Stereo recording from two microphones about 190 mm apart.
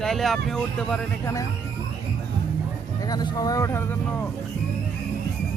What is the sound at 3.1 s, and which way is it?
Speech, 20° left (ahead or behind).